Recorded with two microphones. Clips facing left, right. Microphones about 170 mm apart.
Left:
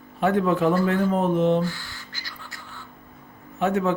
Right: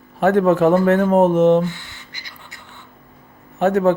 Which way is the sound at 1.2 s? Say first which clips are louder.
Right 7 dB; 80° right.